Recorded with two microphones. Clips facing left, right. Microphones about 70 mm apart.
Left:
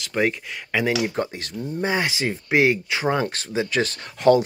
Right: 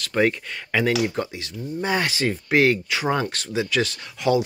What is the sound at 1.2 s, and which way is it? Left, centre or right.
Speech, left.